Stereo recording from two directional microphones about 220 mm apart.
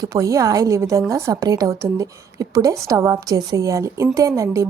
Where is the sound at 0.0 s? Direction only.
15° right (ahead or behind).